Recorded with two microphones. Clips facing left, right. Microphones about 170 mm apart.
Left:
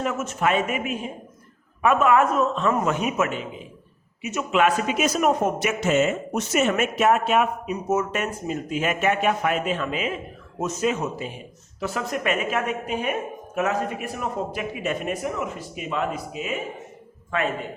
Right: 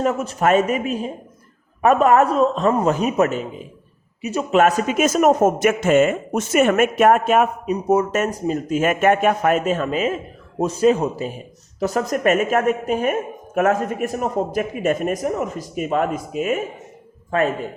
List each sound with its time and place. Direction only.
0.0 s a man's voice: 35° right (ahead or behind); by 16.6 s 50° right (ahead or behind)